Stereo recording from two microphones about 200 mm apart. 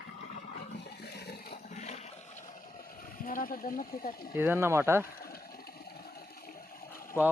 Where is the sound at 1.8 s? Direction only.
35° left (ahead or behind).